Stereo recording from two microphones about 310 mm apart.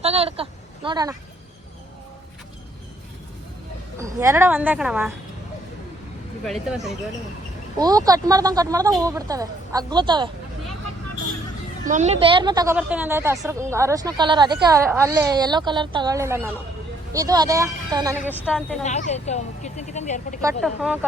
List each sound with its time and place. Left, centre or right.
0.0 s a sound: centre
3.9 s a woman's voice: centre
6.4 s speech: centre
7.8 s a woman's voice: centre
11.9 s a woman's voice: right
18.3 s speech: centre
18.8 s speech: left
20.6 s speech: centre